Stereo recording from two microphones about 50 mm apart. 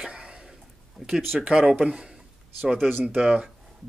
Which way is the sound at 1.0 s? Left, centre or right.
Centre.